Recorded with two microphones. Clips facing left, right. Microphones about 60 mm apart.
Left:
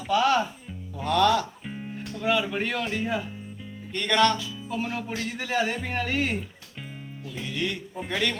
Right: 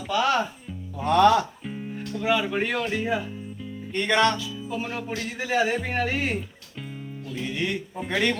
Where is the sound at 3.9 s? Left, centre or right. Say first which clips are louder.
Right 1 dB; centre.